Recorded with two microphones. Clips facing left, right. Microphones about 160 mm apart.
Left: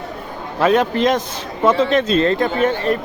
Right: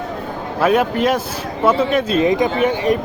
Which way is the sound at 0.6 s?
10° right (ahead or behind).